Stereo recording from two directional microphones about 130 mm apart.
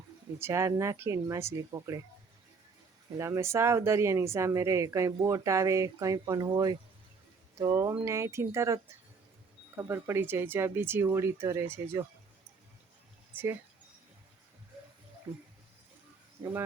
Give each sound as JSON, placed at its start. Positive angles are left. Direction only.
{"t": 0.3, "sound": "speech", "side_deg": -20}
{"t": 3.2, "sound": "speech", "side_deg": -20}
{"t": 13.3, "sound": "speech", "side_deg": -15}
{"t": 16.4, "sound": "speech", "side_deg": -20}